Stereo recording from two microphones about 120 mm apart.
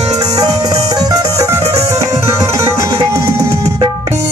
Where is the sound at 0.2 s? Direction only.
30° right (ahead or behind).